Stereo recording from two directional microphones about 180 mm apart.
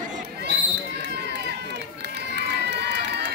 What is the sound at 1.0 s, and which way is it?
Run, 70° right (ahead or behind).